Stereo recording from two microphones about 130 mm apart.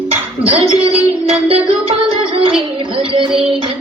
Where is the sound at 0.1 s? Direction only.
50° right (ahead or behind).